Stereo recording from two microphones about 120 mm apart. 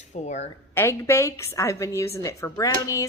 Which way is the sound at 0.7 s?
25° left (ahead or behind).